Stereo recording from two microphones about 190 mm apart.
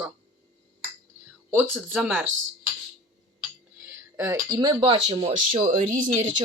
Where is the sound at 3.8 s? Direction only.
10° right (ahead or behind); by 6.1 s 45° right (ahead or behind).